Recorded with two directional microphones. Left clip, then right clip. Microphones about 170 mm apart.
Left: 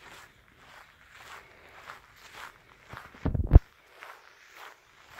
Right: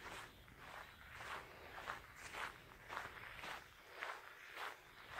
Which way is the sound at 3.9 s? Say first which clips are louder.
Left 1 dB; 55° left (ahead or behind).